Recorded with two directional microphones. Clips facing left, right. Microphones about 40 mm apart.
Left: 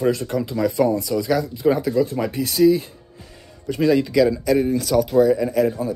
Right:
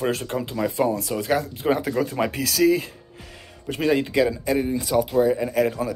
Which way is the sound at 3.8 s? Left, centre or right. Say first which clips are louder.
Left 4 dB; right.